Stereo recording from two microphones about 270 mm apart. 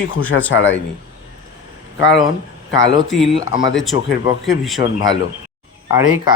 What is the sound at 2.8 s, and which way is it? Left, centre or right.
Speech, left.